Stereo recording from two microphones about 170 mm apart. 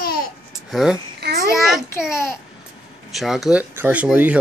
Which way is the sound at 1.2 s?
70° right (ahead or behind).